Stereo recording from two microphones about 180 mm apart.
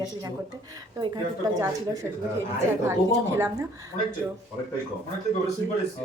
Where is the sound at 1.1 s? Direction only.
20° right (ahead or behind).